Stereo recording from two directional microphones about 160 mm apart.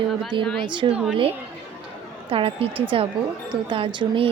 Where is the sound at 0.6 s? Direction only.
30° right (ahead or behind).